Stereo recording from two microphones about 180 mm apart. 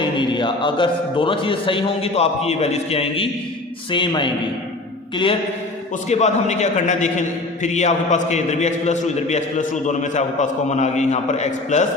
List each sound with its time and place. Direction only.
0.0 s a man's voice: 25° left (ahead or behind)